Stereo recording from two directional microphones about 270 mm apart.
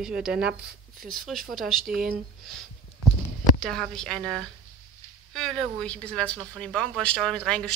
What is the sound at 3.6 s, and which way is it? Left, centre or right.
Speech, centre.